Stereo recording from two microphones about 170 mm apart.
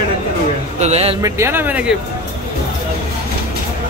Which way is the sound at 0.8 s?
40° right (ahead or behind).